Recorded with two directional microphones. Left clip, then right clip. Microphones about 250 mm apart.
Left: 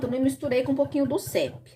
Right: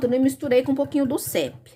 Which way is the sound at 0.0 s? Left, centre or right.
Right.